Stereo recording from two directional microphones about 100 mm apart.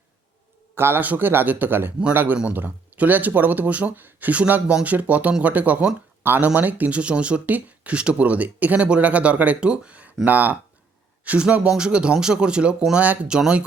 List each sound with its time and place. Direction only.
0.8 s a man's voice: 20° right (ahead or behind)